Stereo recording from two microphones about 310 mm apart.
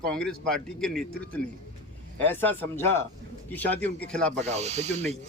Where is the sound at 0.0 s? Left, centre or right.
Centre.